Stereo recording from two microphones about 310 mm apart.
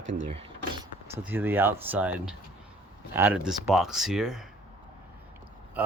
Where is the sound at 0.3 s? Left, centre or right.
Centre.